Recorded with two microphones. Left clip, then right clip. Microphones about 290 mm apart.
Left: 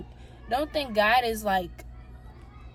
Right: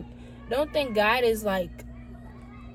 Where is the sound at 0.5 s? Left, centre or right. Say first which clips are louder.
Right 1 dB; centre.